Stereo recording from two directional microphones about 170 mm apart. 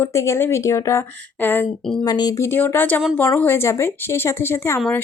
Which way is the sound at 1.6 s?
Centre (ahead or behind).